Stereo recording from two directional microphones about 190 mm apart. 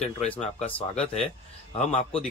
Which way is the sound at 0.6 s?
30° left (ahead or behind).